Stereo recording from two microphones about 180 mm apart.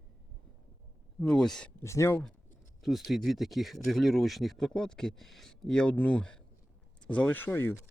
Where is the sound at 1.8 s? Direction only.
15° left (ahead or behind).